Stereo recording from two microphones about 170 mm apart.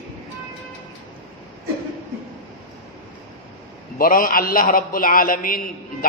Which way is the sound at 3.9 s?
55° left (ahead or behind).